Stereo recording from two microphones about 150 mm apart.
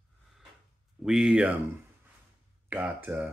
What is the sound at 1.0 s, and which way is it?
Speech, 5° right (ahead or behind).